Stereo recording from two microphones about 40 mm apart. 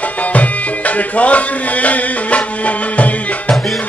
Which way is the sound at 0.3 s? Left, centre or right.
Left.